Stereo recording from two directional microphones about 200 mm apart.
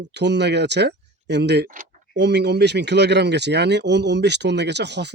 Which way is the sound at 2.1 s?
55° right (ahead or behind).